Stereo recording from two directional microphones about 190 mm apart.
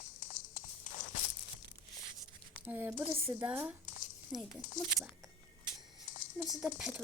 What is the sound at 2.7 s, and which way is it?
Speech, 10° right (ahead or behind).